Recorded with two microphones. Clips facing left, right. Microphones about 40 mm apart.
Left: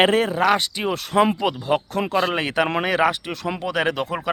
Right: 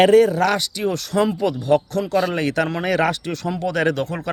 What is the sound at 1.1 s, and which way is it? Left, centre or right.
Speech, left.